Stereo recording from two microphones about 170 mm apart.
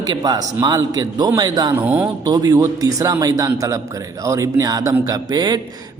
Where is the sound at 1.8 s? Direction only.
10° right (ahead or behind).